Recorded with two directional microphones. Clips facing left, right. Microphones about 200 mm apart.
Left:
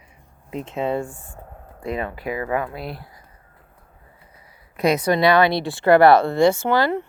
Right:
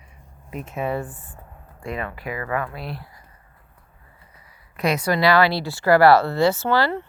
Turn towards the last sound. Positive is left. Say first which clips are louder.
# left 2 dB
turn(degrees=15)  # may be behind; listen again after turning